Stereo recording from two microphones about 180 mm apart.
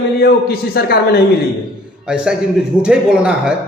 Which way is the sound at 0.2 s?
60° left (ahead or behind).